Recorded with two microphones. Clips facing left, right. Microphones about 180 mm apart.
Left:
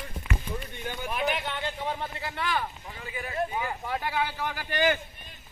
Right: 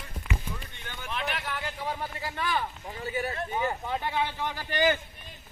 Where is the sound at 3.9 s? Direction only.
20° right (ahead or behind).